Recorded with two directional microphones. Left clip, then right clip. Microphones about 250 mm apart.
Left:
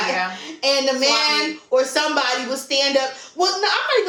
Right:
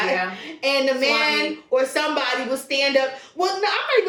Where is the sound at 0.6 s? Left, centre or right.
Centre.